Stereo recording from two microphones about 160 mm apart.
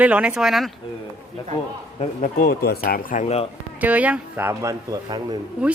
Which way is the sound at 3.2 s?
40° left (ahead or behind).